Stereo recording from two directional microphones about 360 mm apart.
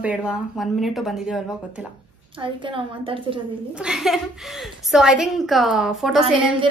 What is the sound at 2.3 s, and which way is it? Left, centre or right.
Speech, centre.